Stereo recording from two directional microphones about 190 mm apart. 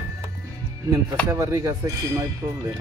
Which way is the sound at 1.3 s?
15° right (ahead or behind).